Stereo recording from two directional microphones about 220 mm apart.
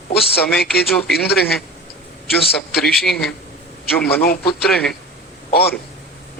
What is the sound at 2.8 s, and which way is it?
A man's voice, centre (ahead or behind).